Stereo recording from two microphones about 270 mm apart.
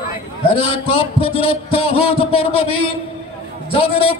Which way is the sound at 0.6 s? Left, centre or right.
Left.